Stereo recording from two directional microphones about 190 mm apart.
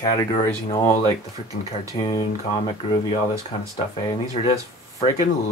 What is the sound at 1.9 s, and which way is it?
Speech, 25° left (ahead or behind).